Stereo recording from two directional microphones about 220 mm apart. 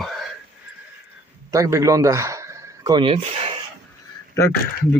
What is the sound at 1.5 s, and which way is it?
A man's voice, 15° right (ahead or behind).